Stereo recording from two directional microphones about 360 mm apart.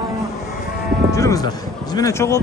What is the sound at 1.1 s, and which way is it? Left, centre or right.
A man's voice, centre.